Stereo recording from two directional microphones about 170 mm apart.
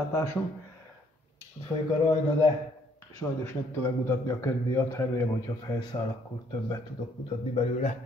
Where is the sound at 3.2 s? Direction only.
15° left (ahead or behind).